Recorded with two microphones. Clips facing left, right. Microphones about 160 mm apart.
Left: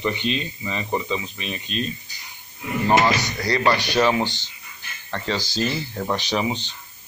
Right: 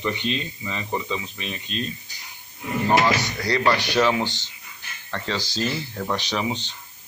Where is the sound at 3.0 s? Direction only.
10° left (ahead or behind).